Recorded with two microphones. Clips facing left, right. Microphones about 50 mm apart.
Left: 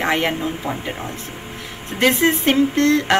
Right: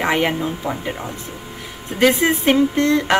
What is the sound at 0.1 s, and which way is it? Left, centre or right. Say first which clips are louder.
Speech: right 1 dB; centre.